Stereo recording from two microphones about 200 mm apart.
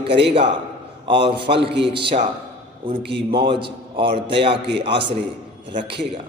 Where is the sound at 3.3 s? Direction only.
25° right (ahead or behind).